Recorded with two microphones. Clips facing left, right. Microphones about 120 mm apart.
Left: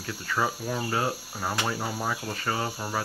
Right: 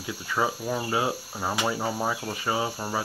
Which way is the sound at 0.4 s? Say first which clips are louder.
Right 2 dB; 10° right (ahead or behind).